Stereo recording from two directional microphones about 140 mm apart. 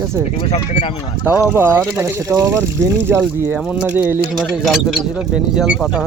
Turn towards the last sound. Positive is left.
turn(degrees=0)  # may be behind; listen again after turning